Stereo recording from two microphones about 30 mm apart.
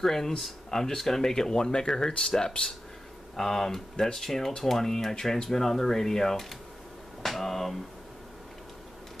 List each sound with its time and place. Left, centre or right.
0.0 s speech: centre
7.2 s speech: centre